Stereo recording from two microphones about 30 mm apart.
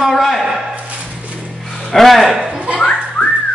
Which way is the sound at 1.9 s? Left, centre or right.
Centre.